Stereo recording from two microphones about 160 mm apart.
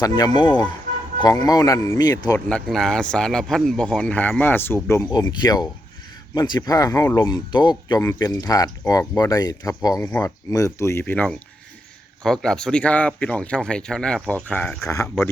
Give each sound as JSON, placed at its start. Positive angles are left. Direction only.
{"t": 0.0, "sound": "speech", "side_deg": 25}
{"t": 2.5, "sound": "speech", "side_deg": 5}